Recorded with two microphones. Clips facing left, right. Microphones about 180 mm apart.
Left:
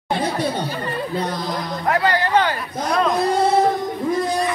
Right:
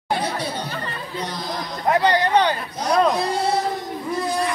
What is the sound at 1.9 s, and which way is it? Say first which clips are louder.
Speech: right 1 dB; 20° right (ahead or behind).